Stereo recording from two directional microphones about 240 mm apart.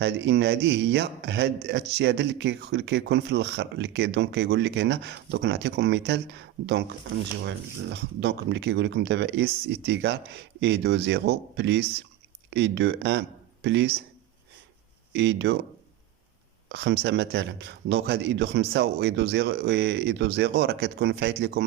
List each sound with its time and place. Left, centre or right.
0.0 s speech: right
15.1 s speech: right
16.6 s speech: right